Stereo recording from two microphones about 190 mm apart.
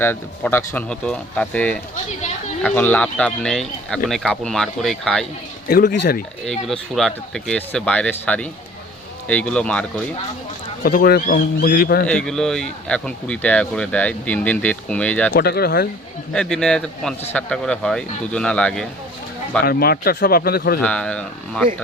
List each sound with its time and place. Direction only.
0.0 s speech: 10° left (ahead or behind)
5.6 s speech: 45° left (ahead or behind)
6.4 s speech: centre (ahead or behind)
10.8 s speech: 50° left (ahead or behind)
12.0 s speech: 5° left (ahead or behind)
15.3 s speech: 55° left (ahead or behind)
16.3 s speech: 5° left (ahead or behind)
19.6 s speech: 55° left (ahead or behind)
20.8 s speech: 5° left (ahead or behind)